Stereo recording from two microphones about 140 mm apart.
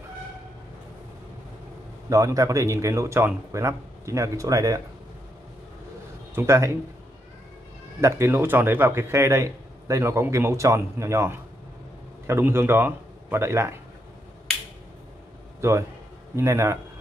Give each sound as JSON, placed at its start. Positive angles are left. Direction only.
{"t": 2.0, "sound": "a man's voice", "side_deg": -25}
{"t": 6.3, "sound": "a man's voice", "side_deg": -20}
{"t": 8.0, "sound": "a man's voice", "side_deg": -20}
{"t": 16.3, "sound": "a man's voice", "side_deg": -20}